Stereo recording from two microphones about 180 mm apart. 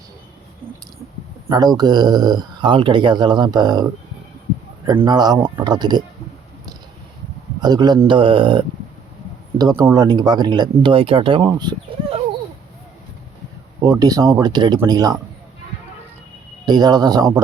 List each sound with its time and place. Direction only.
1.5 s speech: 20° right (ahead or behind)
5.0 s speech: 25° right (ahead or behind)
7.6 s speech: 20° right (ahead or behind)
11.4 s a sound: 25° right (ahead or behind)
13.8 s speech: 20° right (ahead or behind)
16.6 s speech: 25° right (ahead or behind)